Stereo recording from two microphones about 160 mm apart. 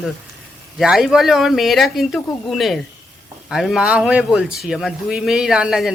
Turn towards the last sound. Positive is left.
turn(degrees=-5)  # may be behind; listen again after turning